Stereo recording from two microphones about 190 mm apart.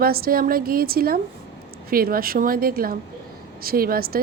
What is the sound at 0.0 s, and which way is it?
A woman's voice, 50° right (ahead or behind).